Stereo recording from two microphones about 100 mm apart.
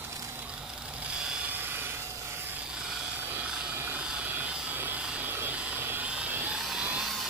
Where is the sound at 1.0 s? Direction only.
10° right (ahead or behind).